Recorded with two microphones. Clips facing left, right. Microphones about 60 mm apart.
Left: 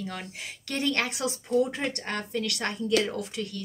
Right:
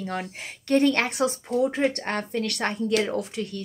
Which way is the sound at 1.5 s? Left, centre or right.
Right.